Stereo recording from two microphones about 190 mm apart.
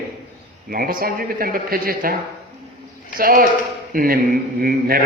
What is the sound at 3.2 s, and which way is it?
A man's voice, 50° right (ahead or behind).